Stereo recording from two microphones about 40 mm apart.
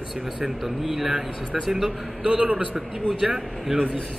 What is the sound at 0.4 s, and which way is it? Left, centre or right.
A man's voice, centre.